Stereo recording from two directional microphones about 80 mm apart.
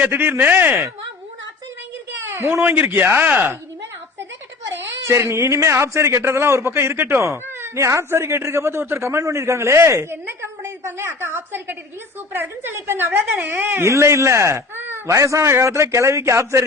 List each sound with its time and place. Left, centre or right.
0.0 s speech: right
2.2 s speech: right
4.6 s speech: right
15.1 s speech: right